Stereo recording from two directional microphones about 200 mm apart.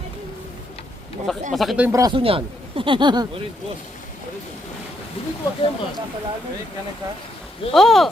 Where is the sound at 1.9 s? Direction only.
20° right (ahead or behind).